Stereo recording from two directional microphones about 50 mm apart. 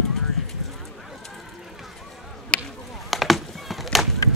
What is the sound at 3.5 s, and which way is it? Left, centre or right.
Chop, centre.